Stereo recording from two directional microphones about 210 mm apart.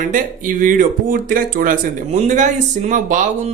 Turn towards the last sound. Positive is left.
turn(degrees=-35)  # may be behind; listen again after turning